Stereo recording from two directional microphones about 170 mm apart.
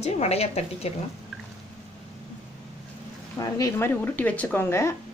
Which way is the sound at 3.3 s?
20° left (ahead or behind).